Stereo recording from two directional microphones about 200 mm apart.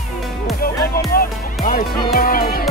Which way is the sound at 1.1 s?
45° left (ahead or behind).